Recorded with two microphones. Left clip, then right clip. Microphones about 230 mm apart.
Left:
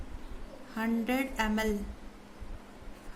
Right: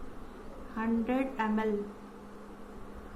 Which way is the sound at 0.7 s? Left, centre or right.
Left.